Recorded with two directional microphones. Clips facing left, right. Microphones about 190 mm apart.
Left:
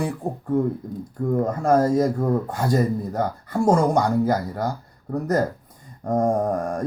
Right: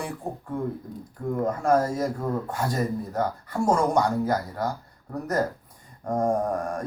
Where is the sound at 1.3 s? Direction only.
35° left (ahead or behind).